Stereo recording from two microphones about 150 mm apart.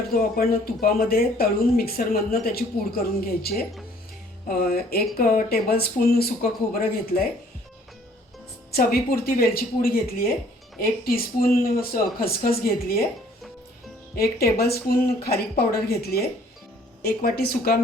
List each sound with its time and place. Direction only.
0.1 s speech: 80° left
4.4 s speech: 75° left (ahead or behind); by 6.3 s 90° left
6.7 s speech: 80° left
8.7 s speech: 85° left
14.5 s speech: 90° left